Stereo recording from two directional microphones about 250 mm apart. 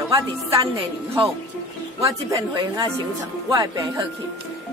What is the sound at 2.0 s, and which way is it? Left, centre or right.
Speech, centre.